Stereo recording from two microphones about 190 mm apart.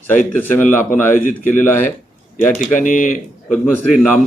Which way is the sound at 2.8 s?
45° left (ahead or behind).